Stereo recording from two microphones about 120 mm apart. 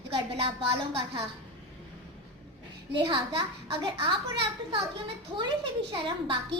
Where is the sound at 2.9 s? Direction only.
40° right (ahead or behind).